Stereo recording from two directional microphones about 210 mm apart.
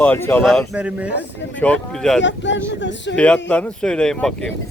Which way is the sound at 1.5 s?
5° left (ahead or behind).